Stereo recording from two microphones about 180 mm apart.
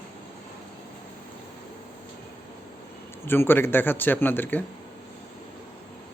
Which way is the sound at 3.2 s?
10° left (ahead or behind).